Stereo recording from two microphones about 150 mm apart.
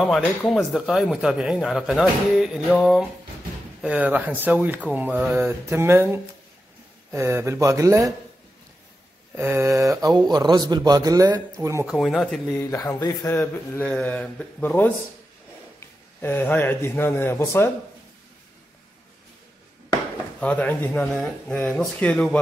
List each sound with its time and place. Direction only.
0.5 s speech: centre (ahead or behind); by 8.1 s 20° right (ahead or behind)
9.3 s speech: 20° right (ahead or behind)
11.8 s speech: centre (ahead or behind)
12.5 s speech: 25° left (ahead or behind)
13.3 s speech: 15° left (ahead or behind)
16.2 s speech: 15° left (ahead or behind)
20.3 s speech: 10° left (ahead or behind)